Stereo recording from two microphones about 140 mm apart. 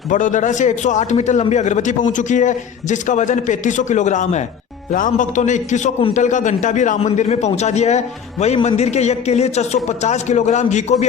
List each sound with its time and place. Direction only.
0.1 s a man's voice: 65° left (ahead or behind)